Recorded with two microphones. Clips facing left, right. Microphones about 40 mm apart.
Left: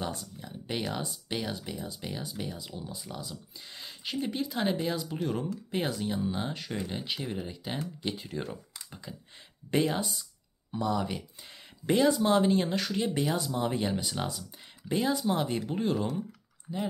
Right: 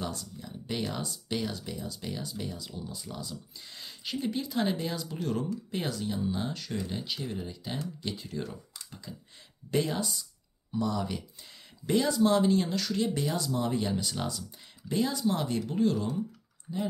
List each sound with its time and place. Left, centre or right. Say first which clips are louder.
0.1 s speech: even; left
8.7 s computer keyboard: left 1 dB; centre
10.7 s speech: left 1 dB; centre